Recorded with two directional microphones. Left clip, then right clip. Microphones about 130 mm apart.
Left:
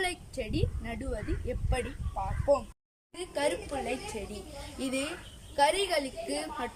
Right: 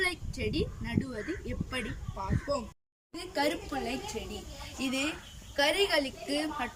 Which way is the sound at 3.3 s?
25° left (ahead or behind).